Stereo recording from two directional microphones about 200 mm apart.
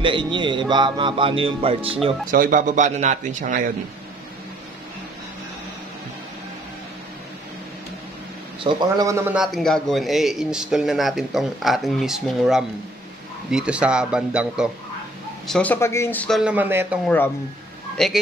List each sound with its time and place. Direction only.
0.0 s speech: 25° right (ahead or behind)
2.3 s a man's voice: 45° right (ahead or behind)
8.6 s a man's voice: 20° right (ahead or behind)
15.4 s a man's voice: 5° left (ahead or behind)
17.9 s speech: centre (ahead or behind)